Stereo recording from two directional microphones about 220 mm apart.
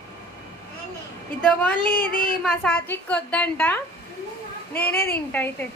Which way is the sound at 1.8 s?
40° left (ahead or behind).